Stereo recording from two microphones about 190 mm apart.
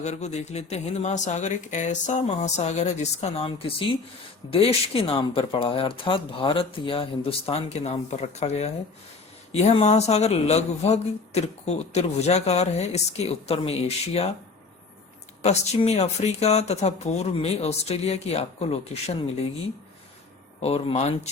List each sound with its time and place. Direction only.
0.0 s speech: 35° left (ahead or behind)
15.4 s speech: 35° left (ahead or behind)
20.6 s speech: 35° left (ahead or behind)